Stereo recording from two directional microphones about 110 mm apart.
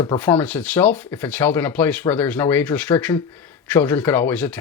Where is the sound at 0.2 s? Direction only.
15° left (ahead or behind).